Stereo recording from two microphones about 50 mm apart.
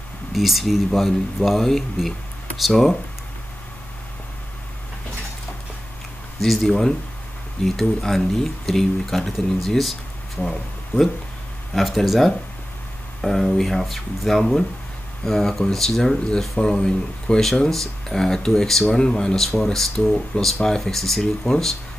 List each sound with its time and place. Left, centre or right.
0.3 s speech: centre
6.4 s speech: centre